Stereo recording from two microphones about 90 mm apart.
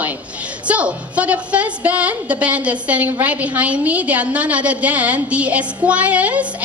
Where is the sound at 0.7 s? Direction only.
15° right (ahead or behind).